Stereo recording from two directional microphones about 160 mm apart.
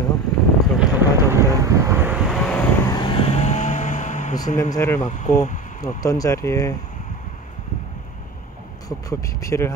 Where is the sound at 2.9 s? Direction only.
30° left (ahead or behind); by 4.4 s 50° left (ahead or behind).